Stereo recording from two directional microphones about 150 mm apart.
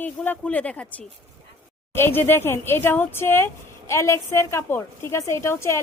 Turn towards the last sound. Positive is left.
turn(degrees=20)  # may be behind; listen again after turning